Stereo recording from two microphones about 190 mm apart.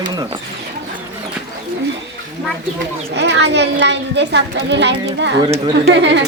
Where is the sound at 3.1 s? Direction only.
65° right (ahead or behind).